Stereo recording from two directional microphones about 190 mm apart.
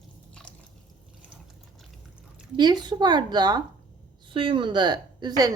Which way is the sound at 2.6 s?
20° right (ahead or behind).